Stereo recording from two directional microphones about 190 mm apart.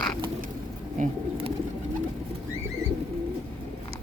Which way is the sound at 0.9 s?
35° right (ahead or behind).